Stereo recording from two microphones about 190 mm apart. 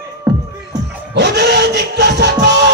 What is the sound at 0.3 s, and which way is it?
Music, 20° right (ahead or behind).